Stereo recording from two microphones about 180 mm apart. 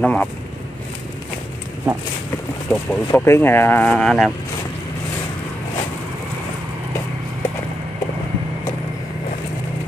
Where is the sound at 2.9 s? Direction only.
10° left (ahead or behind).